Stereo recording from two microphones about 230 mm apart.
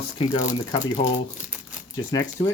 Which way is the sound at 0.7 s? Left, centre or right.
Left.